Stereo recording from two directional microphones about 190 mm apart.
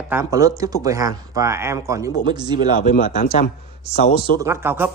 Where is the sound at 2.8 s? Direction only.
40° left (ahead or behind).